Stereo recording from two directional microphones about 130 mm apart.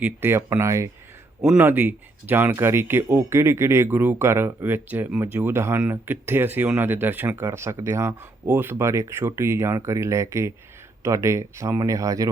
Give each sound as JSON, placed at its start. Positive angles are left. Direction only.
{"t": 0.0, "sound": "speech", "side_deg": -15}